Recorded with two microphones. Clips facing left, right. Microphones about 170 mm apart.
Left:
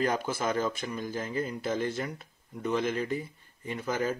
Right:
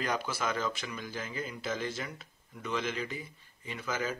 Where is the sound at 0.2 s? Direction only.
45° left (ahead or behind).